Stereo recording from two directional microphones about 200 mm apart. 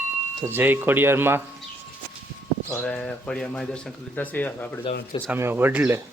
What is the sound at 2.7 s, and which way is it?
Speech, 5° left (ahead or behind).